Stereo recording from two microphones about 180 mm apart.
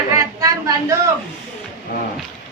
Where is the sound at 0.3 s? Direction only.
20° right (ahead or behind).